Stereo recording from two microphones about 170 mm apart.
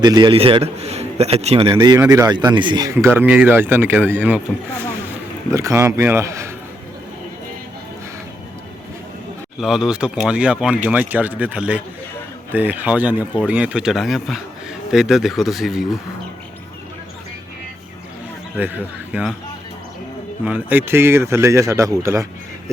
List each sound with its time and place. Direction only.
0.0 s a man's voice: 25° right (ahead or behind)
2.9 s speech: 10° right (ahead or behind)
5.5 s speech: 15° right (ahead or behind)
9.6 s speech: centre (ahead or behind)
19.1 s speech: 10° right (ahead or behind)
20.4 s speech: 10° right (ahead or behind)